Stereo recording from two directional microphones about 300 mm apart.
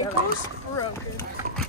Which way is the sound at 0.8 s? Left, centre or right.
Centre.